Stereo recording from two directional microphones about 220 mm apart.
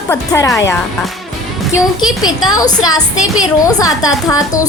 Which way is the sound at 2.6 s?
15° left (ahead or behind).